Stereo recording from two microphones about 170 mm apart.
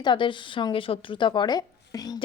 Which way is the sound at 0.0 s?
30° left (ahead or behind).